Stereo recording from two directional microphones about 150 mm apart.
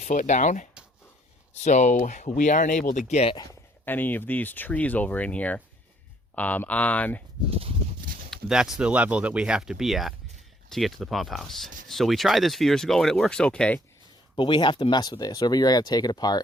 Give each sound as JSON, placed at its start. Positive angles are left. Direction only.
{"t": 0.0, "sound": "speech", "side_deg": 55}
{"t": 3.8, "sound": "speech", "side_deg": 10}
{"t": 8.0, "sound": "a sound", "side_deg": -70}
{"t": 8.3, "sound": "speech", "side_deg": -5}
{"t": 14.3, "sound": "speech", "side_deg": 30}